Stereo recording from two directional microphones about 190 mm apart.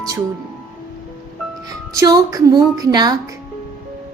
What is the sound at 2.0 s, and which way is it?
A woman's voice, 20° right (ahead or behind).